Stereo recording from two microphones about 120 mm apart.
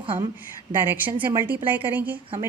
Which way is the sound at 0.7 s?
20° right (ahead or behind).